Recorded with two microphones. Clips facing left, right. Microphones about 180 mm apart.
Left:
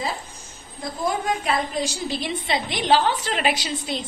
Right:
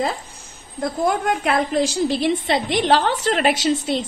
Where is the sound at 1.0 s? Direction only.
55° right (ahead or behind).